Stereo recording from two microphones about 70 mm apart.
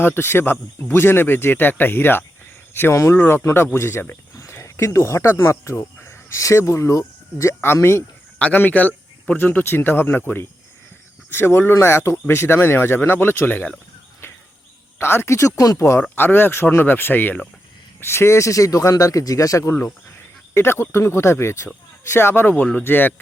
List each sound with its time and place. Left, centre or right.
0.0 s speech: left
2.9 s speech: left
3.2 s speech: left
8.4 s speech: left
14.9 s speech: left
16.0 s speech: left
20.5 s speech: left